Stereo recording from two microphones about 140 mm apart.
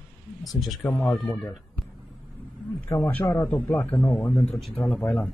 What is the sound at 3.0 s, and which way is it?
Speech, 20° left (ahead or behind).